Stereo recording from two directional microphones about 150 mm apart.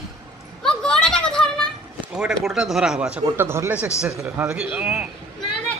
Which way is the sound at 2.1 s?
5° right (ahead or behind).